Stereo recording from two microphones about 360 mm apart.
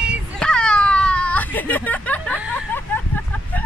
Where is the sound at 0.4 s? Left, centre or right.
Centre.